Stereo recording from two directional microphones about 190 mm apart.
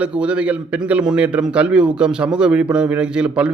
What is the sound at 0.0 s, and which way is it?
Speech, 5° right (ahead or behind).